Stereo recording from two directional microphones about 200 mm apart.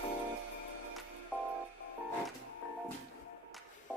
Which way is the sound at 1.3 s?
5° left (ahead or behind).